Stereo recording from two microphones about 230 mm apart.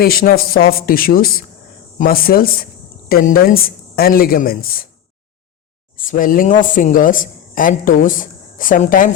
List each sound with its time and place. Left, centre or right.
0.0 s a woman's voice: left
6.1 s a woman's voice: left